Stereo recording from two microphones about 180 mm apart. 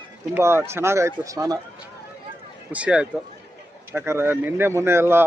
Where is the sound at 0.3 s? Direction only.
15° right (ahead or behind).